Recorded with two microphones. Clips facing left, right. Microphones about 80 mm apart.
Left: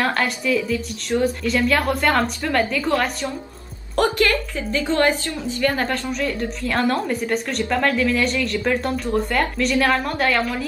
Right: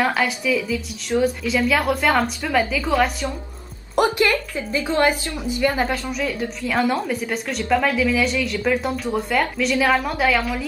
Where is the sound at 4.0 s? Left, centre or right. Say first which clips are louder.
Even; centre.